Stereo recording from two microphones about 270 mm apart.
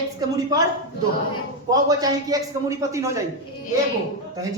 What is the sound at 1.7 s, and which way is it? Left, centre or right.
A man's voice, centre.